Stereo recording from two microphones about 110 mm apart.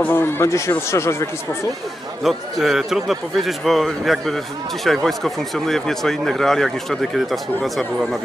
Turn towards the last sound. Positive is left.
turn(degrees=0)  # may be behind; listen again after turning